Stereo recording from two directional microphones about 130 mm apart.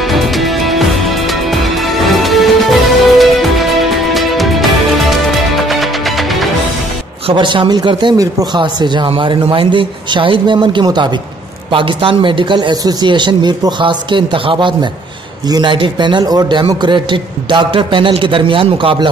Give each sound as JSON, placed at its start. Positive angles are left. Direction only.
{"t": 0.0, "sound": "music", "side_deg": 0}
{"t": 7.2, "sound": "a man's voice", "side_deg": -40}